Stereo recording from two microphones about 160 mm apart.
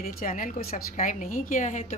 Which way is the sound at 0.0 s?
55° left (ahead or behind).